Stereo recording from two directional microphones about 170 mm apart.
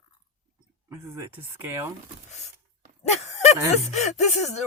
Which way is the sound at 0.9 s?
15° right (ahead or behind).